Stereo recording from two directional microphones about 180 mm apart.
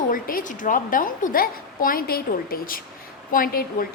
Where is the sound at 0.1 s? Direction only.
50° left (ahead or behind).